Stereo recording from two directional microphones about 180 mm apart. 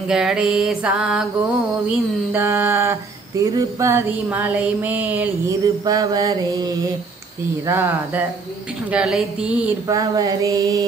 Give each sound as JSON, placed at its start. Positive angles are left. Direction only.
{"t": 0.1, "sound": "music", "side_deg": -5}
{"t": 2.3, "sound": "a sound", "side_deg": -10}
{"t": 5.9, "sound": "mantra", "side_deg": -20}
{"t": 7.6, "sound": "a sound", "side_deg": -15}
{"t": 8.9, "sound": "music", "side_deg": -5}
{"t": 9.8, "sound": "mantra", "side_deg": -20}